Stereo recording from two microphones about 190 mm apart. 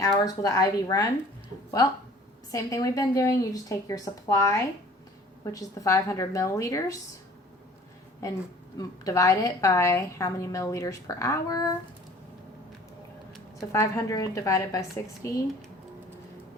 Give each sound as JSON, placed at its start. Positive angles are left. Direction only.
{"t": 0.0, "sound": "speech", "side_deg": 20}
{"t": 2.5, "sound": "a woman's voice", "side_deg": 15}
{"t": 8.2, "sound": "a woman's voice", "side_deg": 15}
{"t": 13.6, "sound": "a woman's voice", "side_deg": 20}